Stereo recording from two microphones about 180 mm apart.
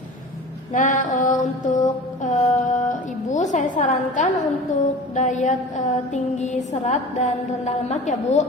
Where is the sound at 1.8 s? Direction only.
40° left (ahead or behind).